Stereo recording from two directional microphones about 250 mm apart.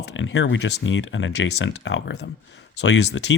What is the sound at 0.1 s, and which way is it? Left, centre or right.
Speech, left.